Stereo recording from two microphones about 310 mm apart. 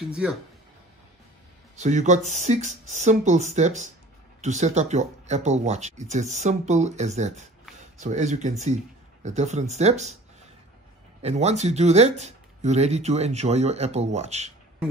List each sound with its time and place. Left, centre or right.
0.1 s speech: centre
1.8 s speech: right
11.2 s speech: right